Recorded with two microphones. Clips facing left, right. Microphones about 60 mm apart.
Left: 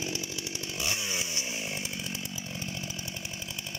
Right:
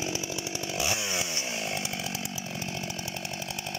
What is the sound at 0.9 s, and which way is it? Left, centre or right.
Chainsaw, right.